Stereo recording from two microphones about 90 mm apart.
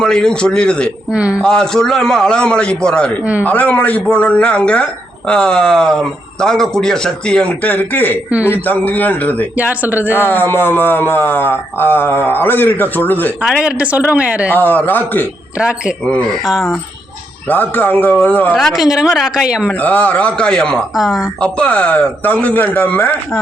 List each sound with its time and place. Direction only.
0.0 s speech: 10° left (ahead or behind)
1.1 s speech: 10° right (ahead or behind)
1.4 s speech: 10° left (ahead or behind)
9.6 s speech: 20° right (ahead or behind)
10.1 s speech: 25° left (ahead or behind)
13.6 s speech: 15° right (ahead or behind)
14.5 s speech: 20° left (ahead or behind)
15.5 s speech: 10° right (ahead or behind)
16.0 s speech: 15° left (ahead or behind)
17.5 s speech: 20° left (ahead or behind)
18.5 s speech: centre (ahead or behind)
19.8 s speech: 15° left (ahead or behind)
20.9 s speech: 5° right (ahead or behind)
21.4 s speech: 15° left (ahead or behind)